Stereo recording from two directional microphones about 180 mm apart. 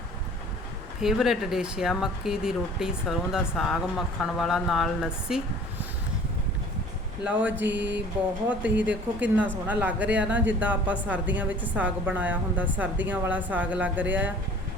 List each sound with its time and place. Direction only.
1.0 s speech: centre (ahead or behind)
7.3 s a woman's voice: 10° right (ahead or behind)
7.6 s mantra: 80° right
8.4 s a woman's voice: 10° right (ahead or behind)